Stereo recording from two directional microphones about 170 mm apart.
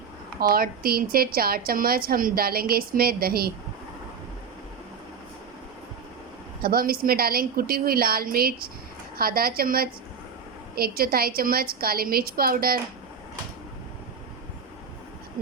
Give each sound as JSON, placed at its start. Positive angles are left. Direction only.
{"t": 0.3, "sound": "a woman's voice", "side_deg": -60}
{"t": 6.6, "sound": "a woman's voice", "side_deg": -60}